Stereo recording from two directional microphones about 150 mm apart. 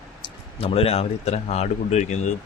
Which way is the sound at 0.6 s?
40° left (ahead or behind).